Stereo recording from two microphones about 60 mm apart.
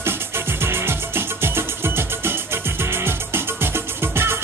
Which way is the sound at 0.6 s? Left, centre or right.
Right.